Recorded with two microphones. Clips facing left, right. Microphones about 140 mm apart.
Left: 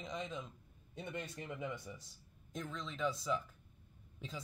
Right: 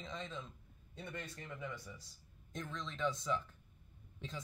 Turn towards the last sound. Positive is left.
turn(degrees=5)  # may be behind; listen again after turning